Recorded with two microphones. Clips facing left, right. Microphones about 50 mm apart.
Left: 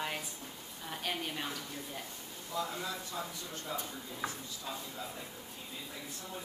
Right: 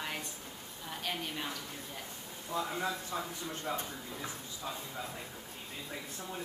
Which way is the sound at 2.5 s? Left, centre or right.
Centre.